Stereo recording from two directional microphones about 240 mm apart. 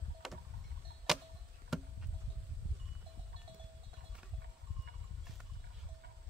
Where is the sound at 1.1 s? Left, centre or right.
Centre.